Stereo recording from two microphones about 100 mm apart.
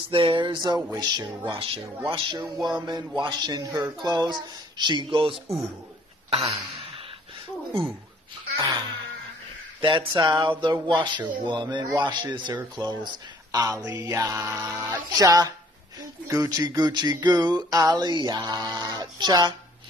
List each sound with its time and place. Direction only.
0.1 s speech: 60° right (ahead or behind); by 1.5 s 45° right (ahead or behind)
1.5 s speech: 65° right (ahead or behind)
2.6 s speech: 45° right (ahead or behind)
6.3 s throat clearing: 85° right
8.5 s speech: 35° right (ahead or behind)
9.8 s speech: 55° right (ahead or behind)